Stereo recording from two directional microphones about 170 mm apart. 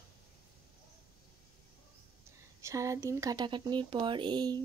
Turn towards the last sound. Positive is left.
turn(degrees=-25)  # may be behind; listen again after turning